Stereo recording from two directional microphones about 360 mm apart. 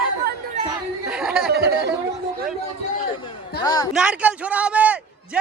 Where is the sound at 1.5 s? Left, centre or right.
Right.